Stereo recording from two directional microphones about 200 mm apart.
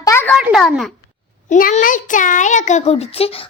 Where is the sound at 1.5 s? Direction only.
40° left (ahead or behind).